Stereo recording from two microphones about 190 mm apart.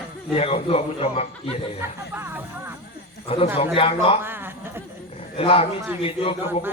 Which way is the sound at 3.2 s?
30° left (ahead or behind).